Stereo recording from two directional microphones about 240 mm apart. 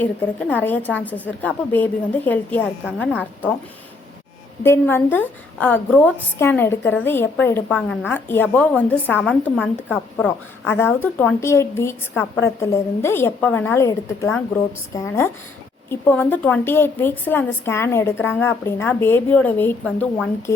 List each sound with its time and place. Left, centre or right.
0.0 s a woman's voice: centre
2.8 s a woman's voice: centre
4.6 s a woman's voice: centre